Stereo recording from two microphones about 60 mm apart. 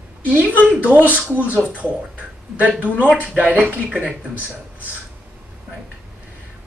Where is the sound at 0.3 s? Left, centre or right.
Right.